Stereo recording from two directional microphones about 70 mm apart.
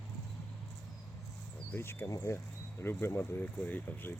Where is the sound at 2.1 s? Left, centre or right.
Left.